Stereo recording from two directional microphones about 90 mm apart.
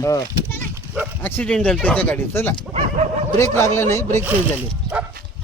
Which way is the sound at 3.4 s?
30° left (ahead or behind).